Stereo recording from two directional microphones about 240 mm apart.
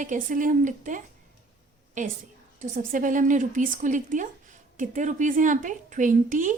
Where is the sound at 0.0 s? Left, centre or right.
Right.